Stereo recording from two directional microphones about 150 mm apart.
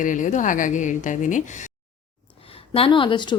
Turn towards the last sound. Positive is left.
turn(degrees=30)  # may be behind; listen again after turning